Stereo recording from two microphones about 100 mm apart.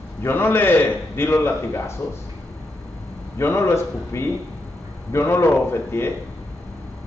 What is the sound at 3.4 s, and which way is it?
A man's voice, 25° left (ahead or behind).